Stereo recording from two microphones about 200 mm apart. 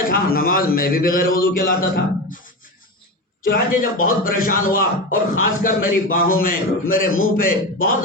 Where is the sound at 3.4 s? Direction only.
45° left (ahead or behind).